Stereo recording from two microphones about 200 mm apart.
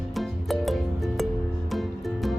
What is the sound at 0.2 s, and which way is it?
Music, centre (ahead or behind).